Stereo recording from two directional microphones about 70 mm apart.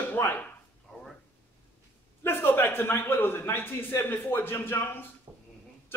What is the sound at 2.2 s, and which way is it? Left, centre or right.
A man's voice, left.